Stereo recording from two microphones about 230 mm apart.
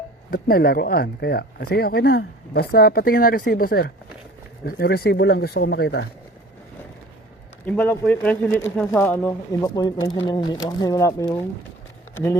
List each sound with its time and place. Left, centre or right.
0.3 s speech: left
7.6 s speech: centre